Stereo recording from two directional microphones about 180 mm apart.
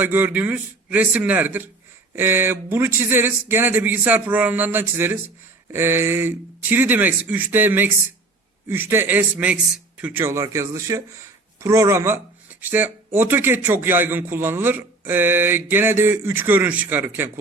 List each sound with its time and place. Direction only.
0.0 s a man's voice: 10° right (ahead or behind)